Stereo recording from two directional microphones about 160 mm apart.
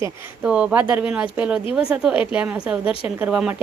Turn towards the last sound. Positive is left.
turn(degrees=-5)  # may be behind; listen again after turning